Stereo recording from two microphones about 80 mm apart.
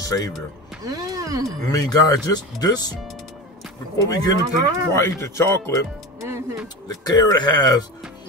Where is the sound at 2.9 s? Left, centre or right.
Centre.